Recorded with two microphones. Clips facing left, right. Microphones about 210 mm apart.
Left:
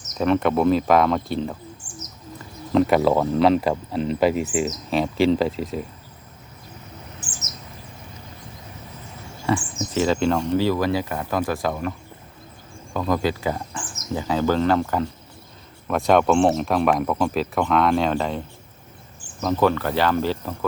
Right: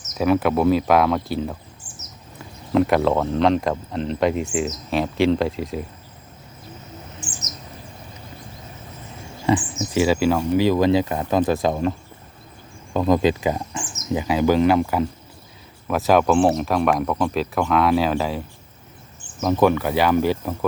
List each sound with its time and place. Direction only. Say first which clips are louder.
0.1 s speech: right 1 dB; 5° right (ahead or behind)
2.7 s speech: even; centre (ahead or behind)
9.5 s speech: right 3 dB; 15° right (ahead or behind)
19.2 s speech: right 2 dB; 20° right (ahead or behind)